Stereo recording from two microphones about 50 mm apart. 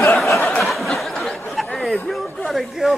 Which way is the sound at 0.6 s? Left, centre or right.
Centre.